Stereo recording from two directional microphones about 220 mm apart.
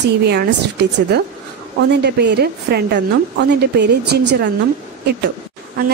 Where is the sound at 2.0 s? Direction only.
50° right (ahead or behind).